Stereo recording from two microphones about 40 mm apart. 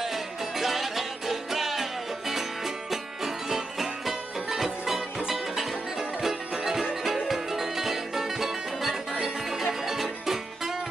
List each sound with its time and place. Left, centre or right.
0.0 s music: centre